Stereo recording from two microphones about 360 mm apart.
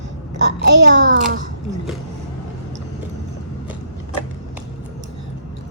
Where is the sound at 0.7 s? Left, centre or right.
Right.